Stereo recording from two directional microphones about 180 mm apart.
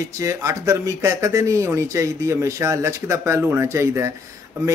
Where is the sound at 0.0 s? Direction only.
20° right (ahead or behind).